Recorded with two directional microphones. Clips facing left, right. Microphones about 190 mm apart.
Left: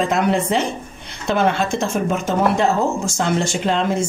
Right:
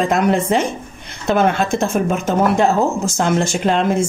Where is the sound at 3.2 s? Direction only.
50° right (ahead or behind).